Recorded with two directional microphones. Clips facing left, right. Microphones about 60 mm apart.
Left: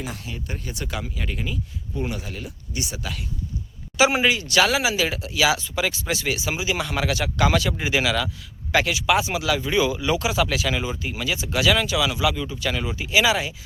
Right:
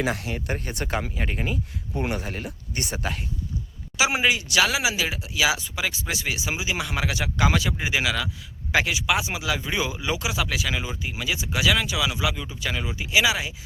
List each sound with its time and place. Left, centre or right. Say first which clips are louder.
0.0 s speech: right 6 dB; right
3.9 s speech: left 3 dB; centre
10.2 s speech: left 4 dB; centre